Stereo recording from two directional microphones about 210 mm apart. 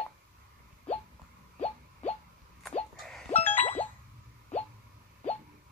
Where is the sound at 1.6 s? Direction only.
30° left (ahead or behind).